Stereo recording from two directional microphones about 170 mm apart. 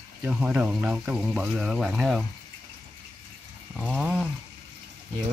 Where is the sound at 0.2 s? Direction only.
10° right (ahead or behind).